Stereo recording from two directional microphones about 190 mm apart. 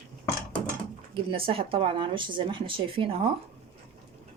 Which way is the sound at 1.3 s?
30° right (ahead or behind).